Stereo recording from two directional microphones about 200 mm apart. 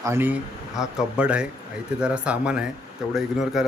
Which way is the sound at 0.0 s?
10° right (ahead or behind).